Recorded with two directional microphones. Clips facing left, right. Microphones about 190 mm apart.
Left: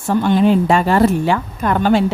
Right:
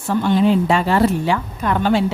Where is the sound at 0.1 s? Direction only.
50° left (ahead or behind).